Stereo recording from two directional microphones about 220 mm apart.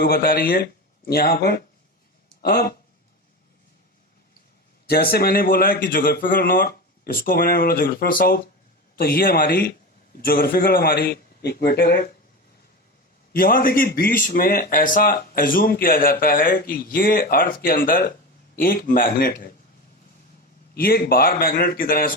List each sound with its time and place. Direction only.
0.0 s a man's voice: 45° left (ahead or behind)
4.9 s a man's voice: 45° left (ahead or behind)
13.3 s speech: 40° left (ahead or behind)
20.7 s speech: 40° left (ahead or behind)